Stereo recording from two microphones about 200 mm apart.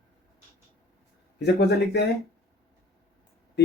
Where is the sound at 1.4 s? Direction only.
55° left (ahead or behind).